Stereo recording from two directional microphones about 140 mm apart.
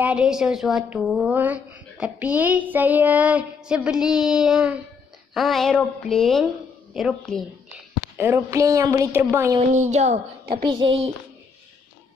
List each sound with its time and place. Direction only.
0.0 s a woman's voice: 5° right (ahead or behind)
1.3 s child singing: 10° right (ahead or behind)
5.3 s a woman's voice: centre (ahead or behind)
8.2 s a woman's voice: 15° right (ahead or behind)
9.8 s a woman's voice: 55° right (ahead or behind)
10.5 s child singing: 35° right (ahead or behind)